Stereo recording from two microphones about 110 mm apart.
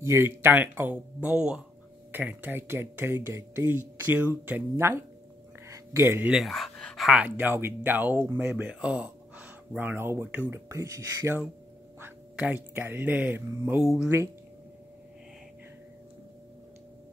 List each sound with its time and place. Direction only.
0.0 s speech: 20° right (ahead or behind)
6.3 s speech: centre (ahead or behind)
7.2 s speech: 15° right (ahead or behind)
13.7 s speech: 5° right (ahead or behind)
14.0 s speech: 25° right (ahead or behind)